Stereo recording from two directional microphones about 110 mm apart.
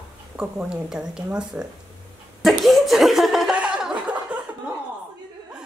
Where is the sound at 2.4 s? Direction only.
Centre (ahead or behind).